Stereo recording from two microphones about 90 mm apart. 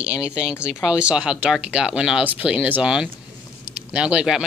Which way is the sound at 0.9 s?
10° right (ahead or behind).